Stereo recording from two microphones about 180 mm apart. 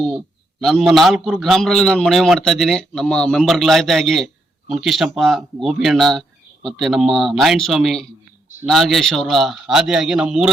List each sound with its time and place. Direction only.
0.6 s a man's voice: centre (ahead or behind)